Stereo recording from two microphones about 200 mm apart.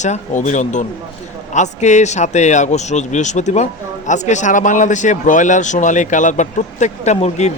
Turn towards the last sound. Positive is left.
turn(degrees=35)  # may be behind; listen again after turning